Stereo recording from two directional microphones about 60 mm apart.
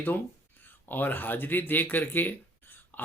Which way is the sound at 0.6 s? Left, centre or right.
Left.